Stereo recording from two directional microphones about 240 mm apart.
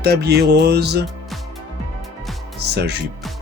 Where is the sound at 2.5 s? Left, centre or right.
Right.